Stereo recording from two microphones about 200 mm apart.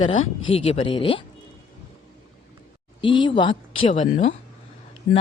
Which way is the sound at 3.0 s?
25° left (ahead or behind).